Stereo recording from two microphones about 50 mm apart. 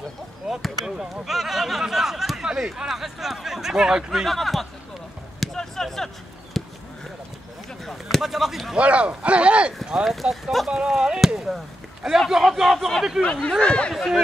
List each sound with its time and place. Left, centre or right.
0.5 s speech: centre
0.8 s speech: centre
4.3 s speech: centre
5.4 s basketball bounce: centre
6.5 s a sound: centre
7.8 s a sound: centre
8.2 s speech: centre
8.7 s speech: right
11.2 s chop: centre
12.4 s speech: centre
13.2 s speech: left
13.9 s speech: centre